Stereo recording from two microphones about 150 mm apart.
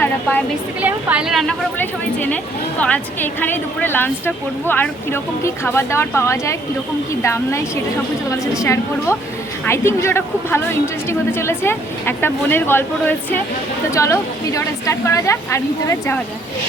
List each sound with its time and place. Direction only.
0.0 s a woman's voice: 10° left (ahead or behind)
0.8 s speech: 10° right (ahead or behind)
1.8 s a woman's voice: 10° left (ahead or behind)
8.6 s a woman's voice: 20° left (ahead or behind)